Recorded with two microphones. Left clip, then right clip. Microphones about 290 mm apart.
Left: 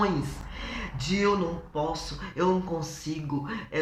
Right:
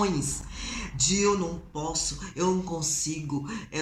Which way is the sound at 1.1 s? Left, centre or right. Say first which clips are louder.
Right 1 dB; centre.